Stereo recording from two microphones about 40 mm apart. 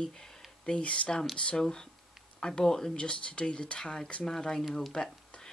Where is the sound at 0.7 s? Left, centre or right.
Left.